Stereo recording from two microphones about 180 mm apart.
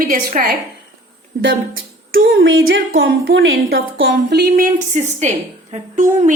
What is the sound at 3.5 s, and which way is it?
A woman's voice, 60° right (ahead or behind).